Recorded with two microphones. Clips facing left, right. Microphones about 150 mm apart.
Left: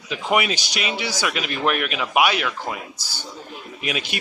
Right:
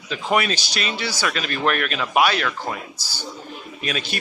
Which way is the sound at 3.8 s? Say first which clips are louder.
Even; 15° left (ahead or behind).